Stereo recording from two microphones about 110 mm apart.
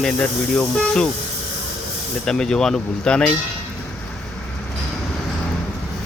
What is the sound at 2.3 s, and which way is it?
Speech, 5° left (ahead or behind).